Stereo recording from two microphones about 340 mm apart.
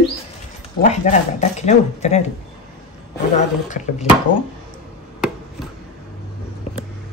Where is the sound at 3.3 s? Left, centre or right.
Left.